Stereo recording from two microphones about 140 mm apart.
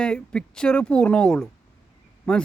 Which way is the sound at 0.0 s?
5° left (ahead or behind).